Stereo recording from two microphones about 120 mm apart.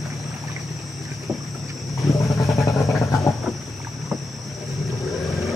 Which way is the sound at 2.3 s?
25° left (ahead or behind).